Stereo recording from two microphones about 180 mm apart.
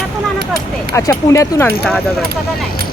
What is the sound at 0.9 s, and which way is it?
Speech, 15° left (ahead or behind).